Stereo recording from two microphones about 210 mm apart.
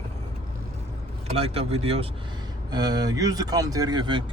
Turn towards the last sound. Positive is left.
turn(degrees=-20)  # may be behind; listen again after turning